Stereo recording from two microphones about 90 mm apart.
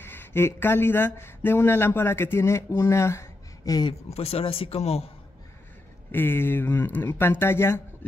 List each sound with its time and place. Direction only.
0.0 s speech: 25° left (ahead or behind)
4.2 s a man's voice: 90° left
6.1 s speech: 25° left (ahead or behind)